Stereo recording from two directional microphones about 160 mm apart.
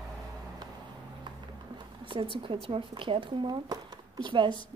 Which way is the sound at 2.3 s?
35° right (ahead or behind).